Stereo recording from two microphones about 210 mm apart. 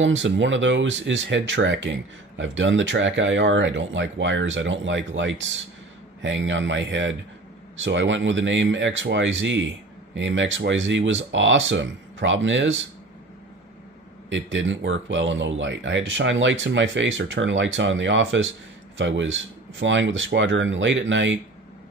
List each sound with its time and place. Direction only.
0.0 s speech: 60° right (ahead or behind)
14.3 s speech: 60° right (ahead or behind)